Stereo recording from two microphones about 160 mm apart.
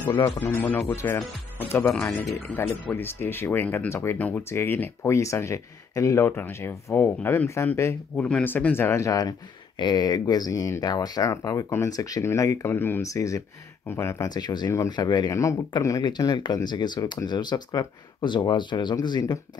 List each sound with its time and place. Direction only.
0.4 s speech: 10° left (ahead or behind)